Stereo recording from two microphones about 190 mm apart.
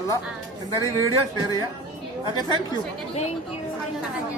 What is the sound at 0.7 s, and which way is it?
Speech, 15° left (ahead or behind).